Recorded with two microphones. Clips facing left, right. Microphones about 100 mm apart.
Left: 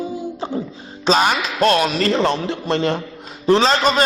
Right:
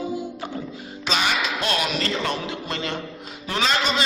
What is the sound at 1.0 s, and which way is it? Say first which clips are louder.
Speech: left 7 dB; 40° left (ahead or behind).